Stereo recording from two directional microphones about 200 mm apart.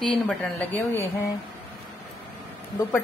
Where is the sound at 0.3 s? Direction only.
10° left (ahead or behind).